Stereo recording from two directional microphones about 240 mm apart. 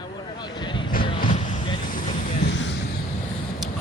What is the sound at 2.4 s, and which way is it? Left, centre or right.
Vehicle, left.